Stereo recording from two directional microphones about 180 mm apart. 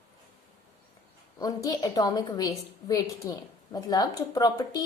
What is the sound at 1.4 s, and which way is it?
A woman's voice, 20° left (ahead or behind).